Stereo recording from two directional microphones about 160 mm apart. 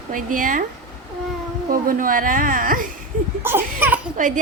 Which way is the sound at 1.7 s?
60° right (ahead or behind).